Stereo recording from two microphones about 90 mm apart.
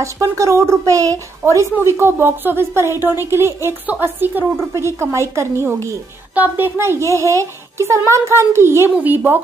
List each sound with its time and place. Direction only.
0.0 s a child's voice: 35° right (ahead or behind)
6.3 s a woman's voice: 20° right (ahead or behind)